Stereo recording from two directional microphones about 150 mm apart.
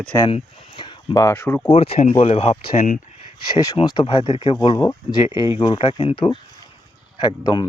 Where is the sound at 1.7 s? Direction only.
40° left (ahead or behind).